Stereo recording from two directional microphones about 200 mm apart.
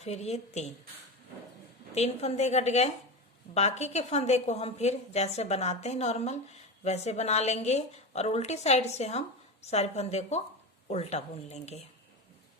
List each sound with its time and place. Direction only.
0.0 s a woman's voice: 35° left (ahead or behind)
2.0 s a woman's voice: 35° left (ahead or behind)